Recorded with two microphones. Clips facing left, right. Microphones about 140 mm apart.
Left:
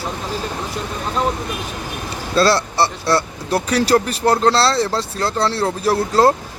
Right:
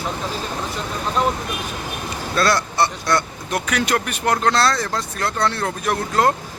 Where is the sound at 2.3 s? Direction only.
30° left (ahead or behind).